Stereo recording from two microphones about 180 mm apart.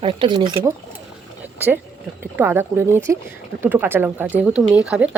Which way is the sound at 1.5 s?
10° right (ahead or behind).